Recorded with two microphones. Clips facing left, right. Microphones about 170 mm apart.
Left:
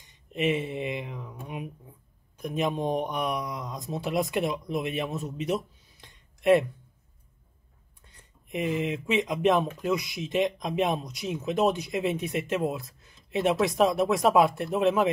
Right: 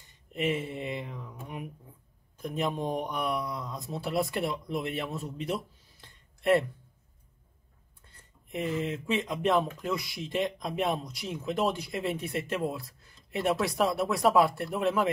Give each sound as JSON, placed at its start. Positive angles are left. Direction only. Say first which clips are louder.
{"t": 0.0, "sound": "speech", "louder": "left 3 dB", "side_deg": 20}
{"t": 2.3, "sound": "speech", "louder": "left 3 dB", "side_deg": 20}
{"t": 8.1, "sound": "speech", "louder": "left 3 dB", "side_deg": 15}